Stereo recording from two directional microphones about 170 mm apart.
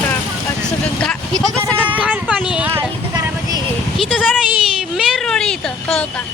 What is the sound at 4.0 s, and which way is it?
Speech, centre (ahead or behind).